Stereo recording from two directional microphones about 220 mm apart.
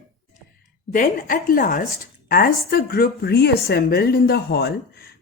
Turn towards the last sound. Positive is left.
turn(degrees=45)  # may be behind; listen again after turning